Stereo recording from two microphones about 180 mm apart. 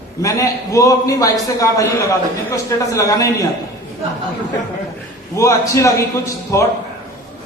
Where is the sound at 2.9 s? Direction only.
15° left (ahead or behind).